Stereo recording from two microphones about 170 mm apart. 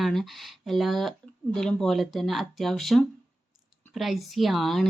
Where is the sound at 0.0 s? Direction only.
Centre (ahead or behind).